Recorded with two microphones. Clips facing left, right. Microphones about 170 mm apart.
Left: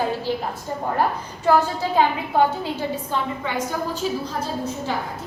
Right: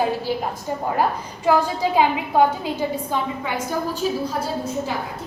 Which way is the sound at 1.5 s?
10° right (ahead or behind).